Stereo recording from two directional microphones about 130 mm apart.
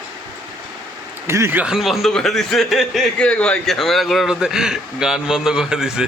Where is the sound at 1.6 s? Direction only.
5° right (ahead or behind).